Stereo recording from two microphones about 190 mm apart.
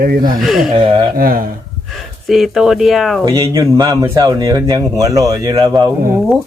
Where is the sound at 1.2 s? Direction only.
50° right (ahead or behind).